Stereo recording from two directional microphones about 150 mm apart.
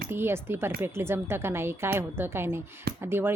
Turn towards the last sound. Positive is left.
turn(degrees=-15)  # may be behind; listen again after turning